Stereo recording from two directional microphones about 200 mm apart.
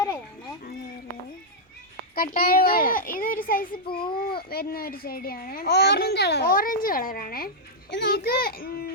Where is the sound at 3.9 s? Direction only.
25° left (ahead or behind).